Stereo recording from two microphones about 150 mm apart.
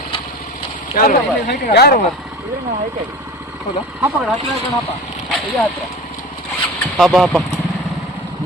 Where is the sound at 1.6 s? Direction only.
85° left.